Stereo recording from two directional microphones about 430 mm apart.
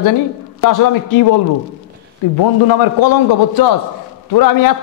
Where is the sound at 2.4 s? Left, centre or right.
Left.